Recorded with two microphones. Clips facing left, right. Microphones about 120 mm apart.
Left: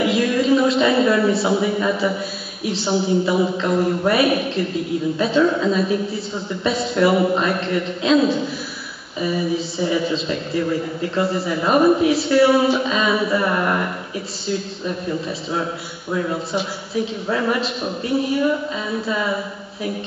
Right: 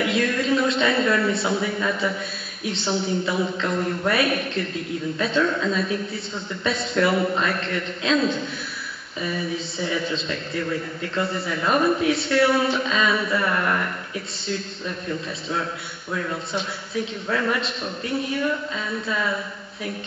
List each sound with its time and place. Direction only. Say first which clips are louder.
0.0 s a sound: left 5 dB; 5° left (ahead or behind)
1.3 s a woman's voice: left 5 dB; centre (ahead or behind)
13.3 s a man's voice: left 4 dB; 20° left (ahead or behind)
16.5 s a woman's voice: left 4 dB; 5° left (ahead or behind)